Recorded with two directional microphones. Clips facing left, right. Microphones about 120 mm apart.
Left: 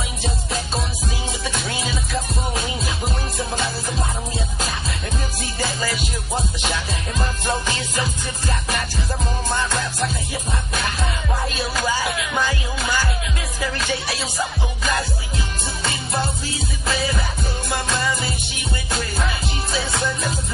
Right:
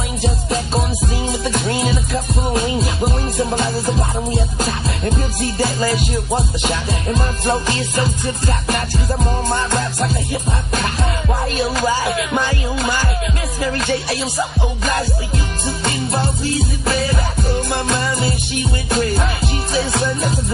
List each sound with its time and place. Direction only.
1.4 s music: 45° right (ahead or behind)
4.6 s music: 40° right (ahead or behind)
9.6 s music: 45° right (ahead or behind)
11.5 s music: 40° right (ahead or behind)
19.7 s music: 40° right (ahead or behind)